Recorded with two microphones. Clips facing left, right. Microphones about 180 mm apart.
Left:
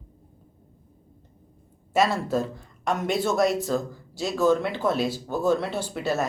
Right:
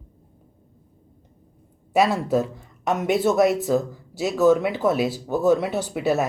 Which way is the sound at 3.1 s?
20° right (ahead or behind).